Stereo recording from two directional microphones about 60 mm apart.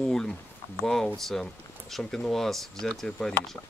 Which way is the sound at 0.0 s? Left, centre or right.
Centre.